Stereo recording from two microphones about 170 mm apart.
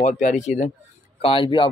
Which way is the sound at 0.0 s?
45° left (ahead or behind).